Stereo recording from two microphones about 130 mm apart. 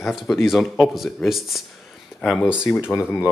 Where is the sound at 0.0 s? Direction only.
Centre (ahead or behind).